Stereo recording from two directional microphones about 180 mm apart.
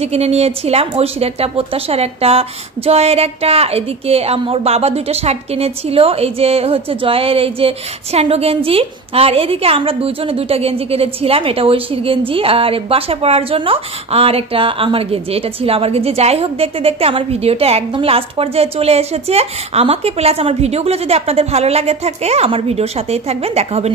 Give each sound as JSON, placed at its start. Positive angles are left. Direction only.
{"t": 0.0, "sound": "a woman's voice", "side_deg": -35}